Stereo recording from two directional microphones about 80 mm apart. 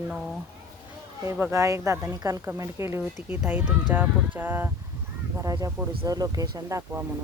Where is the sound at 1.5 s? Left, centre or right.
Right.